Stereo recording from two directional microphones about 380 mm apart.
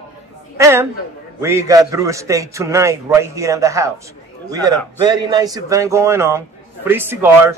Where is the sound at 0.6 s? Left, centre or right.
Centre.